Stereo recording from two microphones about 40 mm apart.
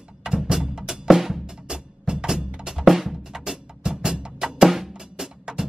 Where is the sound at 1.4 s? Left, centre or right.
Centre.